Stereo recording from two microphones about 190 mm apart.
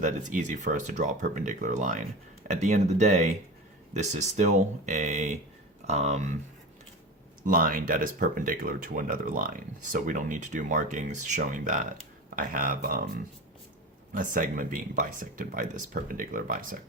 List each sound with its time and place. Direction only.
0.0 s speech: 40° right (ahead or behind)
7.4 s speech: 45° right (ahead or behind)
14.1 s speech: 45° right (ahead or behind)